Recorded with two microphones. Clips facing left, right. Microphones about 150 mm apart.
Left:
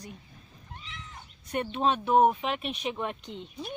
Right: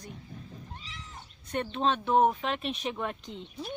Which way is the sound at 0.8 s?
35° right (ahead or behind).